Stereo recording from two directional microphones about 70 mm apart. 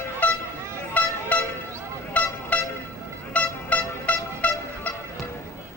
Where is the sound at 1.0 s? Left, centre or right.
Left.